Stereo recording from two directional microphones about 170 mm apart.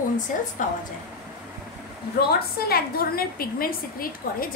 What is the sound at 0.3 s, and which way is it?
Speech, 50° left (ahead or behind).